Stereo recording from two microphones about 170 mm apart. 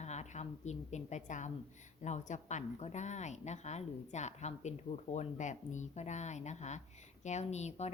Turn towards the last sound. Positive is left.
turn(degrees=40)  # may be behind; listen again after turning